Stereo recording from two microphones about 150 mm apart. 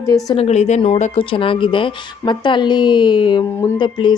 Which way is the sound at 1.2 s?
35° left (ahead or behind).